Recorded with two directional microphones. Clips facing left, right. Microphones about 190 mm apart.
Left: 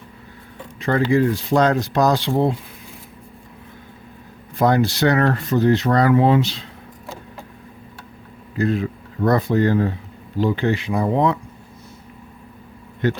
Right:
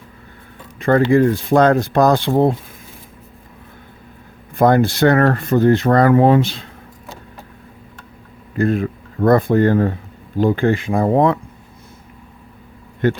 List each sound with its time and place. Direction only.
0.8 s speech: 50° right (ahead or behind)
4.5 s speech: 55° right (ahead or behind)
8.5 s speech: 50° right (ahead or behind)
13.0 s speech: 55° right (ahead or behind)